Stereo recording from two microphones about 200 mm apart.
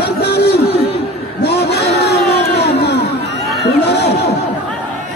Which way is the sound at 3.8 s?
55° left (ahead or behind).